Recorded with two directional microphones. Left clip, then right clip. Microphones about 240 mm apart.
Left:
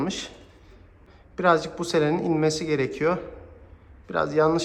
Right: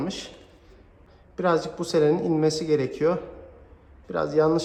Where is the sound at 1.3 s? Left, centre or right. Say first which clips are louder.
Left 3 dB; centre.